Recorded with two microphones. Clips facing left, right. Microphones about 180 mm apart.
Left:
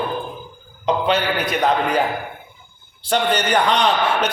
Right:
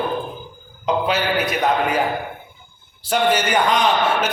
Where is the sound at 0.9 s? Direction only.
5° right (ahead or behind).